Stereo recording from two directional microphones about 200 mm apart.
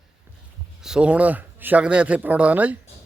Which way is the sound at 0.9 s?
5° right (ahead or behind).